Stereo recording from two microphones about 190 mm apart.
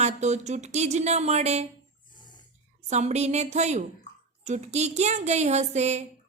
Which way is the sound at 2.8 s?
35° right (ahead or behind).